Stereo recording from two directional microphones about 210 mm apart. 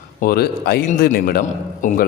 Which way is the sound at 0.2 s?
45° left (ahead or behind).